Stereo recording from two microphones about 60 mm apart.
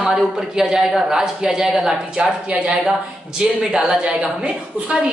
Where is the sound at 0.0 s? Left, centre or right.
Centre.